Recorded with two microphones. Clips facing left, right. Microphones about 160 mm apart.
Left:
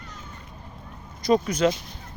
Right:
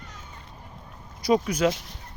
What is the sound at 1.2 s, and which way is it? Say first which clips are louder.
Speech: left 1 dB; 10° right (ahead or behind).